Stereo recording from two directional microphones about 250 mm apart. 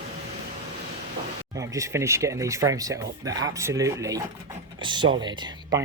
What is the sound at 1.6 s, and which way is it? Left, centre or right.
Speech, centre.